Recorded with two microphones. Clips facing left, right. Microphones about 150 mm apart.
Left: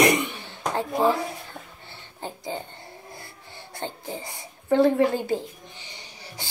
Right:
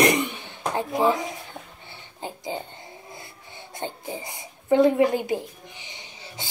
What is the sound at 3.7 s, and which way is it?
Speech, 20° right (ahead or behind).